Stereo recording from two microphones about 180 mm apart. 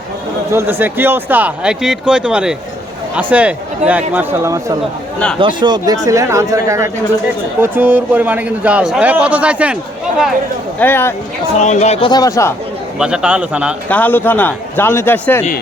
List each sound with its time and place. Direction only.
0.5 s speech: 10° right (ahead or behind)
5.4 s speech: 25° right (ahead or behind); by 9.7 s 5° right (ahead or behind)
10.8 s a man's voice: 10° left (ahead or behind)
11.6 s speech: 40° left (ahead or behind); by 12.5 s 15° left (ahead or behind)
13.0 s speech: 5° right (ahead or behind)
13.9 s a man's voice: 10° left (ahead or behind)